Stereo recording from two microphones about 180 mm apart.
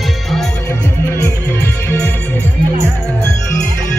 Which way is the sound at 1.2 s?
10° left (ahead or behind).